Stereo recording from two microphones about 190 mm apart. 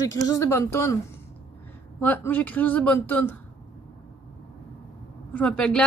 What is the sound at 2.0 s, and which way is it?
Speech, 10° left (ahead or behind).